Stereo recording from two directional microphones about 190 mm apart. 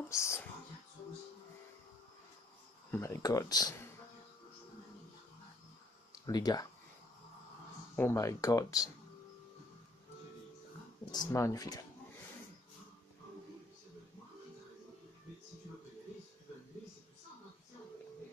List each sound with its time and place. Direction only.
0.1 s speech: 15° left (ahead or behind)
2.9 s speech: 15° left (ahead or behind)
6.2 s speech: 20° left (ahead or behind)
7.9 s speech: 10° left (ahead or behind)
11.1 s speech: 20° left (ahead or behind)